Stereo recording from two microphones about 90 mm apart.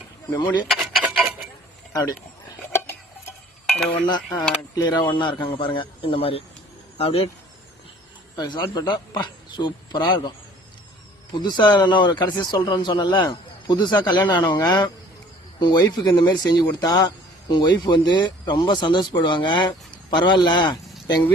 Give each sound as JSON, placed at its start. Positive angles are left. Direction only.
{"t": 0.7, "sound": "cutlery", "side_deg": 0}
{"t": 1.9, "sound": "speech", "side_deg": 45}
{"t": 4.0, "sound": "speech", "side_deg": 50}
{"t": 8.4, "sound": "speech", "side_deg": 55}